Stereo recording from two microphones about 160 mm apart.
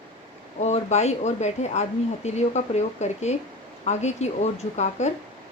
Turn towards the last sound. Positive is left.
turn(degrees=45)  # may be behind; listen again after turning